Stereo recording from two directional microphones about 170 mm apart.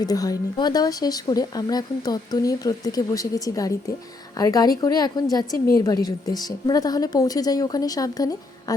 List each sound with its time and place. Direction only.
0.0 s speech: 20° left (ahead or behind)